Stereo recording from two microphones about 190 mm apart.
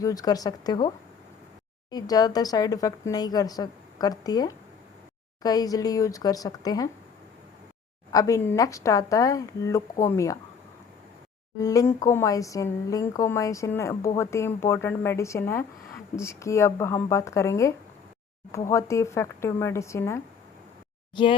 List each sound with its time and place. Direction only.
0.0 s speech: 20° left (ahead or behind)
8.1 s speech: 15° left (ahead or behind)
11.6 s speech: 15° left (ahead or behind)